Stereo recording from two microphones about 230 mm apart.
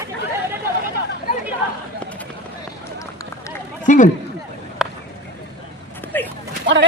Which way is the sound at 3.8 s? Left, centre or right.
Left.